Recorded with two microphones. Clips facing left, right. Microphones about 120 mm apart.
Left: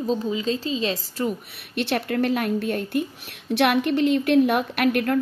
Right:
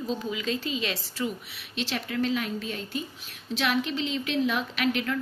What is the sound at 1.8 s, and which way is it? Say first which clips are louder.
A woman's voice: left 6 dB; 55° left (ahead or behind).